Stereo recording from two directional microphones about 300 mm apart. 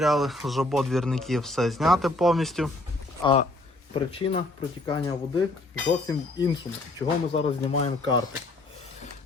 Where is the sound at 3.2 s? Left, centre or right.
Centre.